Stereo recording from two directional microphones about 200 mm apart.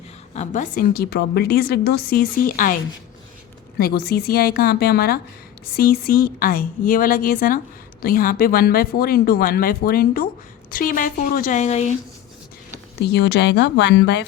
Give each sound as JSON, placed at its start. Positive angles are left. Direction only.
{"t": 0.3, "sound": "a woman's voice", "side_deg": 40}
{"t": 3.8, "sound": "a woman's voice", "side_deg": 50}
{"t": 13.0, "sound": "speech", "side_deg": 55}